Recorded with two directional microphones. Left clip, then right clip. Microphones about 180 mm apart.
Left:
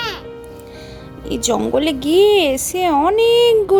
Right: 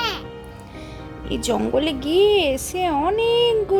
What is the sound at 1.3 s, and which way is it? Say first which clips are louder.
Speech: left 4 dB; 25° left (ahead or behind).